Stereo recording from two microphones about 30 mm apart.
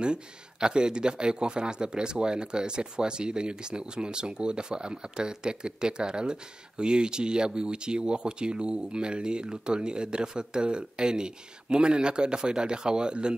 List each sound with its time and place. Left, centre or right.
0.0 s speech: right